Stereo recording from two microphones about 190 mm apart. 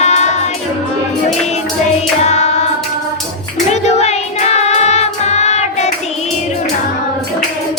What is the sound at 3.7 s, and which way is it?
Music, 35° left (ahead or behind).